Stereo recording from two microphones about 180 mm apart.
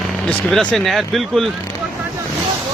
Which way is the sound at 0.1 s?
5° left (ahead or behind).